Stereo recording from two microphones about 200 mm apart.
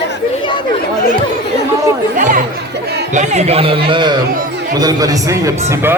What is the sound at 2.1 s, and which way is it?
Speech, 40° right (ahead or behind).